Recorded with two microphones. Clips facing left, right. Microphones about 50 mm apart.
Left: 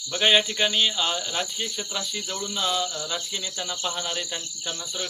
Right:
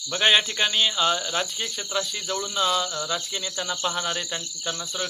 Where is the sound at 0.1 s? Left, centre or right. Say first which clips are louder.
Even; centre.